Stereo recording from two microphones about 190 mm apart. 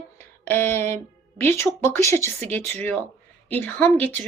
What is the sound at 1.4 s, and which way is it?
A woman's voice, 10° left (ahead or behind).